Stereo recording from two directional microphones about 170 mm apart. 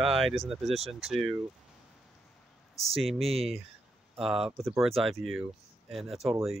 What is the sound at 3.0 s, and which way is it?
Speech, centre (ahead or behind).